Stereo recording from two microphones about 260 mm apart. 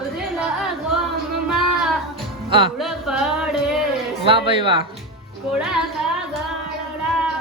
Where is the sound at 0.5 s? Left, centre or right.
Centre.